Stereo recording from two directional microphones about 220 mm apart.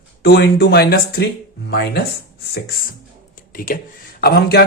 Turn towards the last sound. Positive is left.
turn(degrees=45)  # may be behind; listen again after turning